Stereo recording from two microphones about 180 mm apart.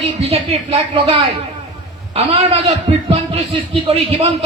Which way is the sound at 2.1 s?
30° right (ahead or behind).